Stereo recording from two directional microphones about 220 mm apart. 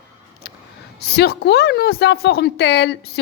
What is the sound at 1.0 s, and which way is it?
A woman's voice, 45° left (ahead or behind).